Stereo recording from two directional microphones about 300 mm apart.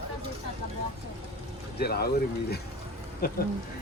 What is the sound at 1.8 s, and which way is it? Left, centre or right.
Speech, left.